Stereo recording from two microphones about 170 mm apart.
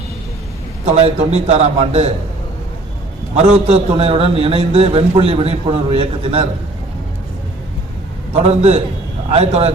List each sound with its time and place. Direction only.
0.9 s a man's voice: 40° right (ahead or behind)
3.3 s a man's voice: 40° right (ahead or behind)
8.3 s a man's voice: 40° right (ahead or behind)